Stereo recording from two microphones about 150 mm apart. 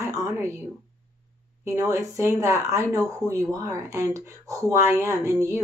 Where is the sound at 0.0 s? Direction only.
20° right (ahead or behind).